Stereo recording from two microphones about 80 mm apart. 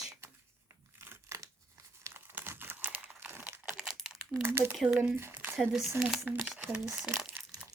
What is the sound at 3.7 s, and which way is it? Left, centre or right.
Crumpling, centre.